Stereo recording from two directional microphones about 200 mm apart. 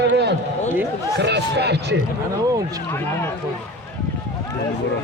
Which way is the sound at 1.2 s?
55° right (ahead or behind).